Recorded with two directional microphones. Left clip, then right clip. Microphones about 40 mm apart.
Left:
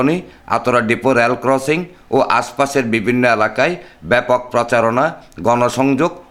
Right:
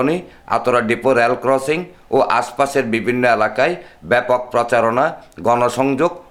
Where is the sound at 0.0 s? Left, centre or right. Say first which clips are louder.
Left 1 dB; left.